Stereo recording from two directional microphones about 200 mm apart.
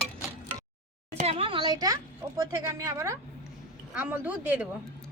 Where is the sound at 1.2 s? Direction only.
25° right (ahead or behind); by 4.6 s 5° right (ahead or behind).